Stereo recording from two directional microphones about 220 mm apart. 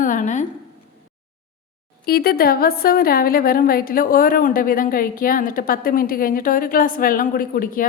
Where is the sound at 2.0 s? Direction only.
45° left (ahead or behind).